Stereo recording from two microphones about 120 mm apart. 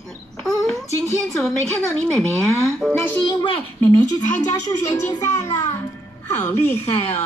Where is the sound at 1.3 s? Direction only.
5° left (ahead or behind).